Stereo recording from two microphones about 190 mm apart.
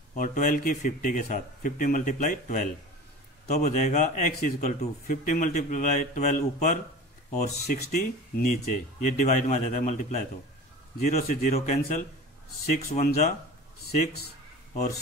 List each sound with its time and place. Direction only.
0.1 s a man's voice: 45° left (ahead or behind)
7.6 s speech: 55° left (ahead or behind)
7.9 s a man's voice: 40° left (ahead or behind)